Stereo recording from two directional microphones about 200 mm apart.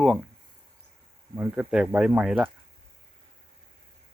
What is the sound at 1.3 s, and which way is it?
Speech, 10° right (ahead or behind).